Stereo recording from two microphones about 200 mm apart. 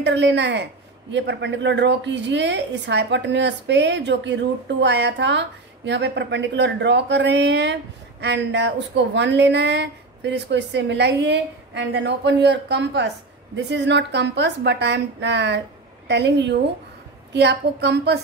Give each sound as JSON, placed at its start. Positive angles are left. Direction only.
{"t": 0.0, "sound": "a woman's voice", "side_deg": -60}